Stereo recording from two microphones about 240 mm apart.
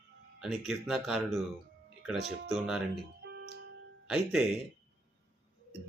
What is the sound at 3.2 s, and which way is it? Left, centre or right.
Music, right.